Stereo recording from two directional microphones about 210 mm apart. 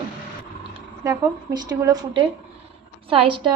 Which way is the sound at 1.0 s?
15° right (ahead or behind).